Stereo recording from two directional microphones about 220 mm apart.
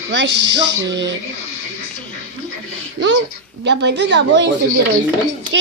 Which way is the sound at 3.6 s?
50° right (ahead or behind).